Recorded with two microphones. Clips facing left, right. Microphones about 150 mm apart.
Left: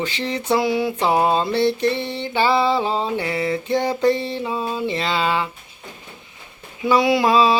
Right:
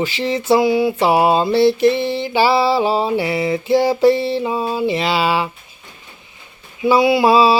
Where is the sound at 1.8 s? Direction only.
90° right.